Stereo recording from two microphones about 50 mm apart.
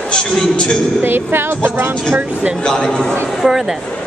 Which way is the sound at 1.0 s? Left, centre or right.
Right.